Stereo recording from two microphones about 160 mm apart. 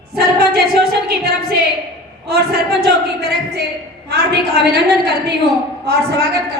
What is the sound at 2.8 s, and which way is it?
A woman's voice, 90° right.